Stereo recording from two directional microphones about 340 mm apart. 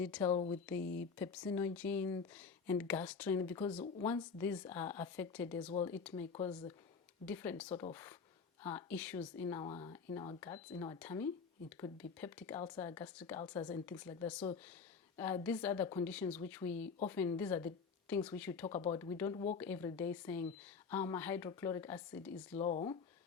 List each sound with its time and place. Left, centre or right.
0.0 s speech: centre
0.3 s speech: centre
0.8 s speech: left
1.2 s speech: centre
18.7 s speech: centre
22.5 s speech: centre